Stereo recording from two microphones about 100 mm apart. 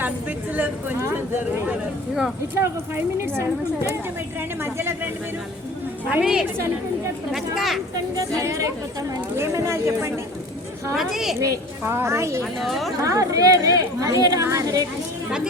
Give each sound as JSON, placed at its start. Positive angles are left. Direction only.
{"t": 0.0, "sound": "a sound", "side_deg": -15}
{"t": 2.6, "sound": "speech", "side_deg": -25}
{"t": 6.1, "sound": "a woman's voice", "side_deg": -10}
{"t": 8.4, "sound": "speech", "side_deg": -30}
{"t": 10.9, "sound": "speech", "side_deg": -5}
{"t": 11.3, "sound": "speech", "side_deg": -35}
{"t": 12.5, "sound": "speech", "side_deg": 0}
{"t": 13.0, "sound": "speech", "side_deg": -35}